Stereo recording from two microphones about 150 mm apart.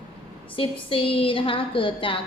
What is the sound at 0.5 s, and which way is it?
A woman's voice, 35° left (ahead or behind).